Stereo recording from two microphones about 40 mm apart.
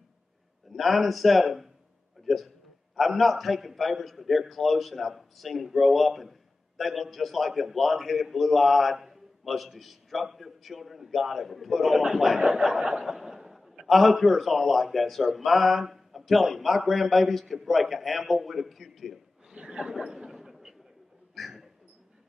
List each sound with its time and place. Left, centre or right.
0.7 s a man's voice: centre
19.5 s speech: right
20.2 s a sound: centre